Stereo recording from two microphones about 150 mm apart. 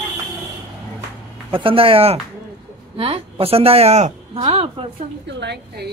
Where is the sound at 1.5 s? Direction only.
35° right (ahead or behind).